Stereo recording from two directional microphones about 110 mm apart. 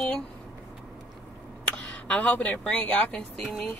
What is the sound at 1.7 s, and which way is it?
Speech, 10° left (ahead or behind).